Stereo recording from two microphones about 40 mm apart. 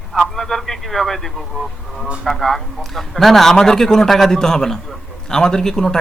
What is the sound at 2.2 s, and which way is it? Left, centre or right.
A man's voice, centre.